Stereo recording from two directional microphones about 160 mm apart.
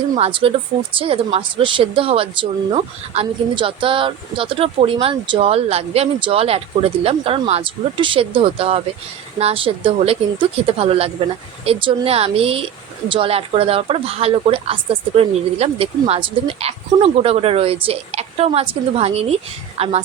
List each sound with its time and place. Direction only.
0.2 s a woman's voice: 35° right (ahead or behind)